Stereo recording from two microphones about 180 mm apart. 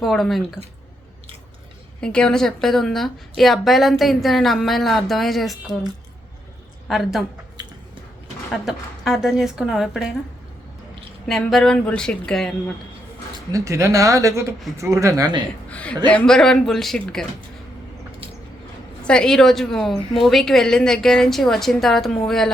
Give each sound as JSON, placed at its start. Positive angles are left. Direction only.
{"t": 0.0, "sound": "a woman's voice", "side_deg": 0}
{"t": 2.0, "sound": "a woman's voice", "side_deg": 5}
{"t": 6.8, "sound": "a woman's voice", "side_deg": 0}
{"t": 8.6, "sound": "a woman's voice", "side_deg": 0}
{"t": 11.3, "sound": "a woman's voice", "side_deg": 0}
{"t": 13.5, "sound": "speech", "side_deg": -15}
{"t": 15.7, "sound": "a woman's voice", "side_deg": 5}
{"t": 19.0, "sound": "a woman's voice", "side_deg": 5}